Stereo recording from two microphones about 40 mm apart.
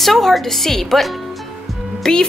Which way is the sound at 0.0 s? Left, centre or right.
Centre.